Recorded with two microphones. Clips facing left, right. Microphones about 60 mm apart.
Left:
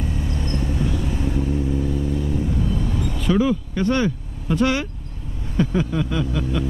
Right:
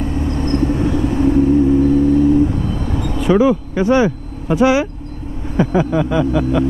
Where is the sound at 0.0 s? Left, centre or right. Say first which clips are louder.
Right 8 dB; right.